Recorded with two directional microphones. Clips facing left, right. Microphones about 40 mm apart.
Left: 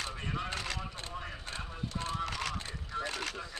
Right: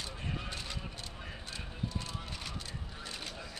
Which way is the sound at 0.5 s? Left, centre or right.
Left.